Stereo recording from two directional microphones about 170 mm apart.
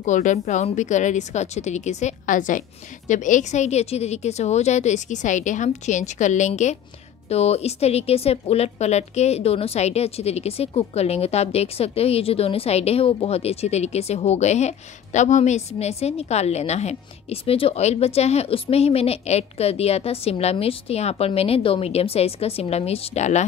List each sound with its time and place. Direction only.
0.0 s a woman's voice: 45° left (ahead or behind)